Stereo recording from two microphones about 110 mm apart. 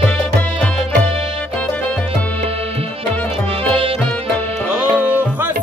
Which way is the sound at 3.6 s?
60° right (ahead or behind).